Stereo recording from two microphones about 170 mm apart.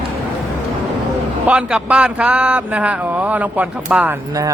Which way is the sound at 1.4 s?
5° right (ahead or behind).